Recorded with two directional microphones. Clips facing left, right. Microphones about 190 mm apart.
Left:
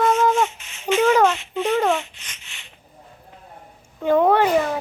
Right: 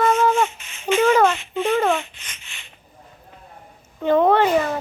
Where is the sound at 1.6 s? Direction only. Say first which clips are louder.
Right 1 dB; 10° right (ahead or behind).